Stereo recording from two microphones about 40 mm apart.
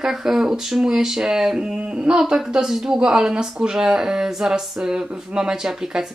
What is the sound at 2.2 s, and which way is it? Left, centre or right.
Speech, centre.